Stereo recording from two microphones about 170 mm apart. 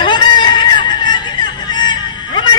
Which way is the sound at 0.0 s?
25° left (ahead or behind).